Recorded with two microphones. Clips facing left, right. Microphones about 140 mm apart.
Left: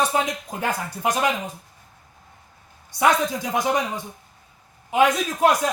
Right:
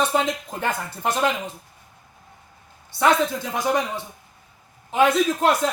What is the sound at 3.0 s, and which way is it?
Speech, 15° left (ahead or behind).